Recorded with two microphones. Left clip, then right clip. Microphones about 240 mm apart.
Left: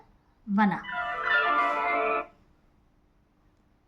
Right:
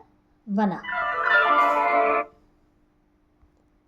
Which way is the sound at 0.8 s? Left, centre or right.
Right.